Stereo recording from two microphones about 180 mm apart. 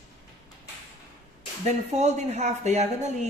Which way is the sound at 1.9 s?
40° right (ahead or behind).